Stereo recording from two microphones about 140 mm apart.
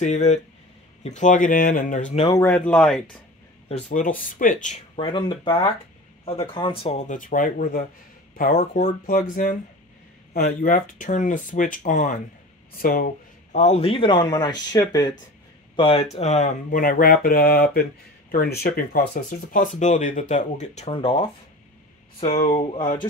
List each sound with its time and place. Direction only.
0.0 s speech: 55° left (ahead or behind)
2.3 s speech: 15° left (ahead or behind)
3.9 s speech: 70° left (ahead or behind)
4.9 s a man's voice: 35° left (ahead or behind); by 7.8 s 70° left (ahead or behind)
9.0 s speech: 80° left
10.3 s speech: 90° left; by 12.2 s 60° left (ahead or behind)
12.7 s a man's voice: 90° left; by 15.1 s 30° left (ahead or behind)
15.7 s speech: 40° left (ahead or behind); by 19.0 s 90° left
19.5 s speech: 65° left (ahead or behind)
20.9 s a man's voice: 40° left (ahead or behind)
22.4 s a man's voice: 45° left (ahead or behind)